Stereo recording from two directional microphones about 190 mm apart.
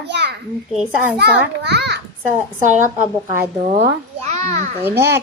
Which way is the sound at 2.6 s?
40° right (ahead or behind).